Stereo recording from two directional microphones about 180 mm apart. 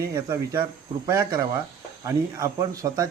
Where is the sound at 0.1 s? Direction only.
15° right (ahead or behind).